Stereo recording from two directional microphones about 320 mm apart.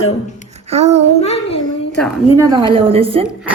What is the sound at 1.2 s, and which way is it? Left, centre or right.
Child singing, centre.